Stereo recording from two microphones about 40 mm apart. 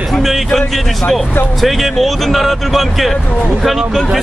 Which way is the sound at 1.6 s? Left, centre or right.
Centre.